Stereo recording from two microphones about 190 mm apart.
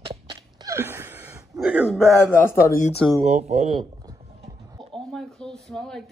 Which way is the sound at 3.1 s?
35° right (ahead or behind).